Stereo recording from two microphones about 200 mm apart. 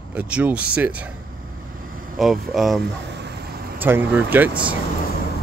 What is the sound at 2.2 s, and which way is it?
Speech, centre (ahead or behind).